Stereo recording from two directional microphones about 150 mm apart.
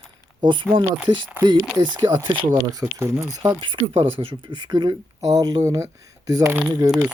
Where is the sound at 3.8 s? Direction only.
35° right (ahead or behind).